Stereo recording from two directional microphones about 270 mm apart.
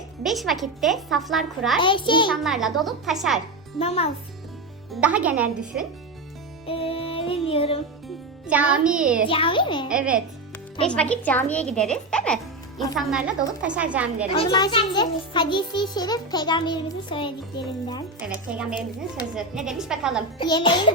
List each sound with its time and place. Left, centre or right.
0.2 s a child's voice: centre
1.8 s a child's voice: centre
2.3 s a child's voice: centre
3.8 s a child's voice: left
4.9 s a child's voice: centre
6.7 s music: left
8.0 s speech: centre
9.2 s a child's voice: centre
9.9 s a child's voice: centre
14.3 s a child's voice: centre
18.3 s a child's voice: centre
20.4 s a child's voice: centre